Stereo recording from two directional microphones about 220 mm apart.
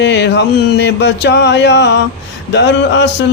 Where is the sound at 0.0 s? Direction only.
50° left (ahead or behind).